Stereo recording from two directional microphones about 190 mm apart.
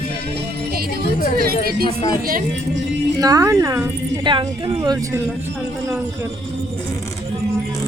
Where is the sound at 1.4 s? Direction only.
50° right (ahead or behind).